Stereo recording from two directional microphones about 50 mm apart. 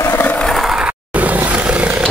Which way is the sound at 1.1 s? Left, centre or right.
Right.